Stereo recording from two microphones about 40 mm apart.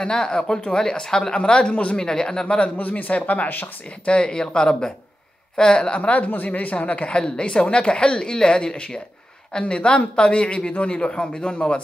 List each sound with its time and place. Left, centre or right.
0.0 s a woman's voice: left
2.4 s a woman's voice: left
2.8 s speech: left
4.0 s a woman's voice: left
5.9 s a woman's voice: left